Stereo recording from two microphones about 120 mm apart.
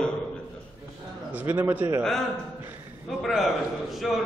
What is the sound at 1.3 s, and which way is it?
Speech, 15° right (ahead or behind).